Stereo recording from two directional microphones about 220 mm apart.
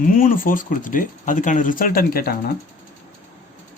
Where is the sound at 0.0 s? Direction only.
40° left (ahead or behind).